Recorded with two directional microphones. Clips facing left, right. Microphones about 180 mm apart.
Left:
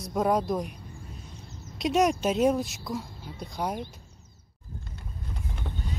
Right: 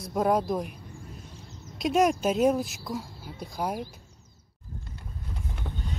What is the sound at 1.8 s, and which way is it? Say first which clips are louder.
Speech: right 1 dB; centre (ahead or behind).